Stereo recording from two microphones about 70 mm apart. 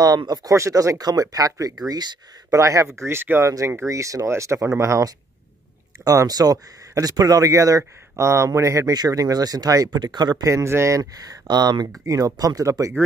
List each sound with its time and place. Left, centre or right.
0.0 s speech: right
0.5 s speech: right
1.7 s speech: right
2.5 s speech: right
3.5 s speech: right
6.0 s speech: right
8.9 s speech: right
9.9 s speech: right
10.4 s speech: right
11.0 s speech: right